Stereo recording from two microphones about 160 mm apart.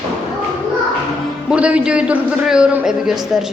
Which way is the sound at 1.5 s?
10° right (ahead or behind).